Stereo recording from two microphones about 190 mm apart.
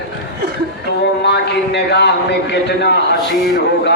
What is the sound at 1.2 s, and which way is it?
A man's voice, 60° left (ahead or behind).